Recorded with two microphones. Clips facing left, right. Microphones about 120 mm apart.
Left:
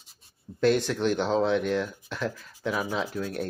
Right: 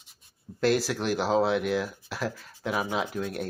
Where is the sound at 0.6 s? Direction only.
5° right (ahead or behind).